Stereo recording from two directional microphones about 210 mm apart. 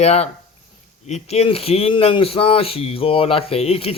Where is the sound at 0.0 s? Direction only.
30° left (ahead or behind).